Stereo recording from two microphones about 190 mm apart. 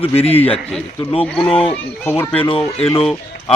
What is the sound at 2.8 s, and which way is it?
Speech, 30° left (ahead or behind).